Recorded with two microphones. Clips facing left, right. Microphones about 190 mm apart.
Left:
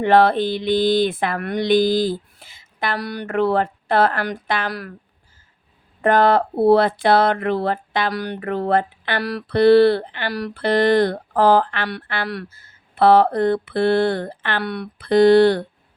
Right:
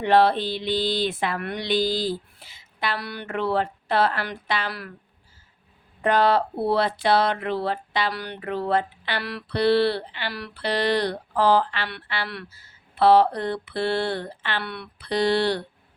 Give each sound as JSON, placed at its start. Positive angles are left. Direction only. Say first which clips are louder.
{"t": 0.0, "sound": "speech", "louder": "left 4 dB", "side_deg": 50}
{"t": 6.0, "sound": "speech", "louder": "left 4 dB", "side_deg": 50}